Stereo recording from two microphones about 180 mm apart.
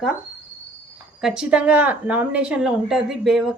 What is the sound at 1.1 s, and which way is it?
A woman's voice, 5° right (ahead or behind).